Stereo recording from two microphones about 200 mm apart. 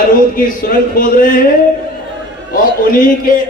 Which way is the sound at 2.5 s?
45° left (ahead or behind).